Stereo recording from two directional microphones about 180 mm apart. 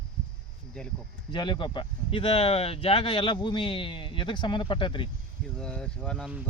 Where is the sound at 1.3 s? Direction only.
25° left (ahead or behind).